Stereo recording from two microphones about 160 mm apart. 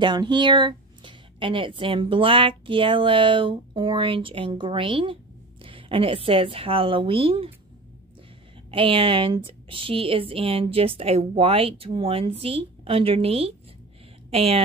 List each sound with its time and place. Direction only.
0.0 s speech: 30° right (ahead or behind)
8.6 s speech: 35° right (ahead or behind)